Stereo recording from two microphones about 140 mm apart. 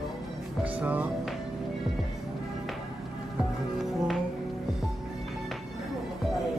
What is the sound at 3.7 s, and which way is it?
Music, centre (ahead or behind).